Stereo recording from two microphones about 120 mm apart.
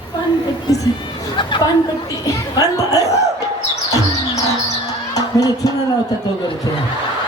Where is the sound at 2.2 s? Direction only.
30° left (ahead or behind).